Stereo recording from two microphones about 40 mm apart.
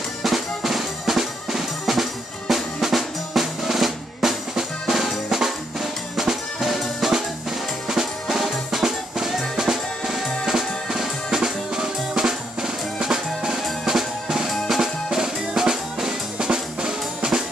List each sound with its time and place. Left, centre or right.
0.2 s drum: centre